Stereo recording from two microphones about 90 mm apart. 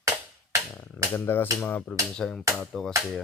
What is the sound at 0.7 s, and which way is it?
Speech, 25° left (ahead or behind).